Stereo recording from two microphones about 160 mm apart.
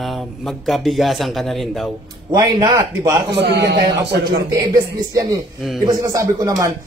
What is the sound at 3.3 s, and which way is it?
Speech, 90° right.